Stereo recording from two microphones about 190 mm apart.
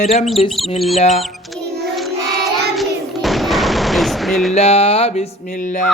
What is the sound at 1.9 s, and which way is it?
Child singing, centre (ahead or behind).